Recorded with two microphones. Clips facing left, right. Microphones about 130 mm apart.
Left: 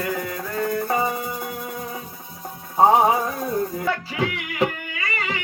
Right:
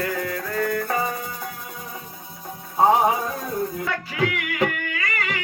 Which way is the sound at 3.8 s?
25° left (ahead or behind).